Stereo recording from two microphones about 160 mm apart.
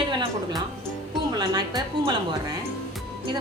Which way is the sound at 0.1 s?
30° right (ahead or behind).